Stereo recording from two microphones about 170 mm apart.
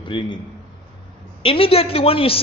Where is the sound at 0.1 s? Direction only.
30° left (ahead or behind).